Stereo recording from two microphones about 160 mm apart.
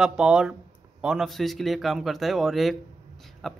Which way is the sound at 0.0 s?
5° right (ahead or behind).